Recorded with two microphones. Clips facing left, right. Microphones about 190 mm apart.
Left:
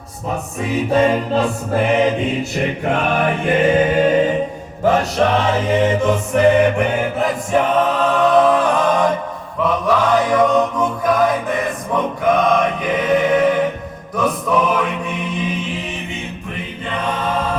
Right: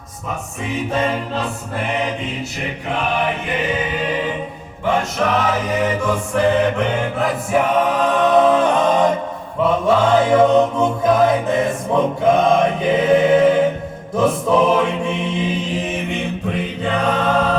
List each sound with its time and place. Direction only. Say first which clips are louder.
2.8 s chant: left 1 dB; 50° left (ahead or behind)
4.8 s music: left 4 dB; 40° left (ahead or behind); by 6.8 s 15° left (ahead or behind)
7.2 s a capella: even; 10° right (ahead or behind)
9.6 s music: right 1 dB; 25° right (ahead or behind)
14.2 s mantra: right 2 dB; 25° right (ahead or behind)
16.8 s choir: right 3 dB; 80° right